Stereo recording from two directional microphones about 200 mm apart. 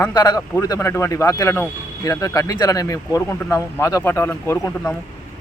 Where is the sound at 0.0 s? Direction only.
20° left (ahead or behind).